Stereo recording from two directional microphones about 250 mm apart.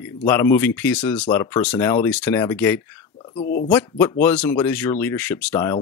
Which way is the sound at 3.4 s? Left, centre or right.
Left.